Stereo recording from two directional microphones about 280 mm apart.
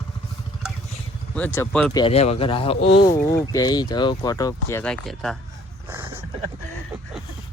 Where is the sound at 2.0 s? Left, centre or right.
Left; by 5.4 s centre.